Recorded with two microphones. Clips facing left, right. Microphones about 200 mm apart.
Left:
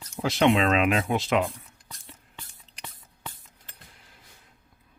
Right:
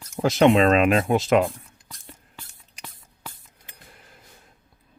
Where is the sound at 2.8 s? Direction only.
10° right (ahead or behind).